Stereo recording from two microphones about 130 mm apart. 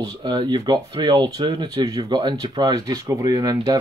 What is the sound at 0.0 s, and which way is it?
Speech, 30° right (ahead or behind).